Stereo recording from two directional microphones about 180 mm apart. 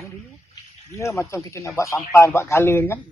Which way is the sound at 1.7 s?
15° left (ahead or behind).